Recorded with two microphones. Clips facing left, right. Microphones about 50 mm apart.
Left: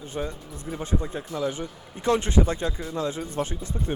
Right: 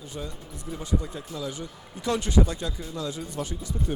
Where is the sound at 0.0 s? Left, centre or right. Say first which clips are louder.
Left 5 dB; left.